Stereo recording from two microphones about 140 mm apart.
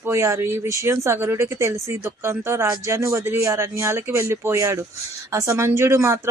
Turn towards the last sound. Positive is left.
turn(degrees=-20)  # may be behind; listen again after turning